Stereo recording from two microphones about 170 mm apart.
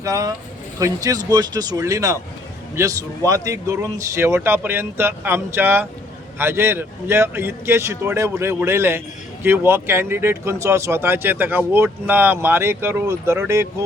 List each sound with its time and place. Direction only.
0.0 s speech: 20° right (ahead or behind)